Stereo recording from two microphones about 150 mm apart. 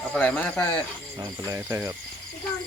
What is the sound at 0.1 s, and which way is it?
Speech, 10° left (ahead or behind).